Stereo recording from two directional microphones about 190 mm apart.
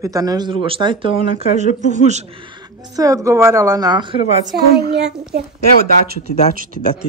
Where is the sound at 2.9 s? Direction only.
15° right (ahead or behind).